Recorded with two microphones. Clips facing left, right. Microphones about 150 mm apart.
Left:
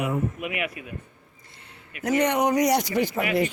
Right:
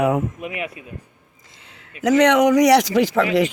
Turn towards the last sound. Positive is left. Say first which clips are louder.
# right 6 dB
turn(degrees=-90)